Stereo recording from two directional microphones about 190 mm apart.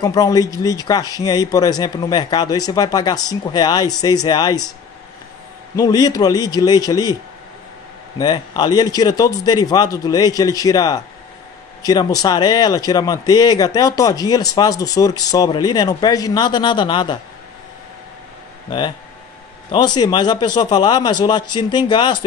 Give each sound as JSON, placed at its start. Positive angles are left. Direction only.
{"t": 0.0, "sound": "speech", "side_deg": 20}
{"t": 5.8, "sound": "speech", "side_deg": 20}
{"t": 8.2, "sound": "speech", "side_deg": 20}
{"t": 18.7, "sound": "speech", "side_deg": 25}